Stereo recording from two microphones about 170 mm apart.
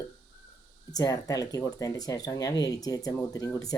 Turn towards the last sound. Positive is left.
turn(degrees=20)  # may be behind; listen again after turning